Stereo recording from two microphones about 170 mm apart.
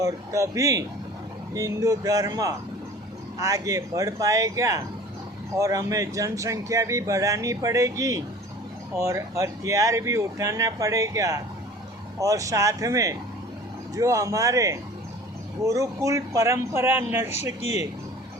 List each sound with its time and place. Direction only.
0.0 s speech: 20° right (ahead or behind)
17.3 s speech: 40° left (ahead or behind)